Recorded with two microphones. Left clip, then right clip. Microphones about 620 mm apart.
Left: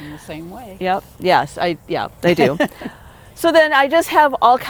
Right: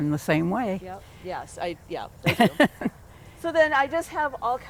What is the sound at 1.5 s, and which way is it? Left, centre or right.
Speech, left.